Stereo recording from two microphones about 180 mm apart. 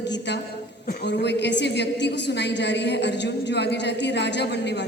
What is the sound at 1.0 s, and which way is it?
A woman's voice, 70° left (ahead or behind).